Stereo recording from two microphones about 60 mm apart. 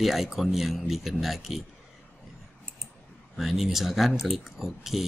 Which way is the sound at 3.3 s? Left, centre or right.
Centre.